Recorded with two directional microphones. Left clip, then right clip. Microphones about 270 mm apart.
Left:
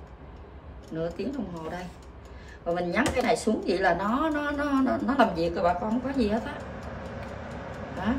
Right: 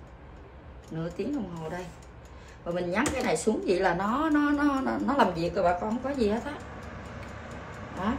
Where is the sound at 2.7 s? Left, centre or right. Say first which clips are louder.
Left 2 dB; centre.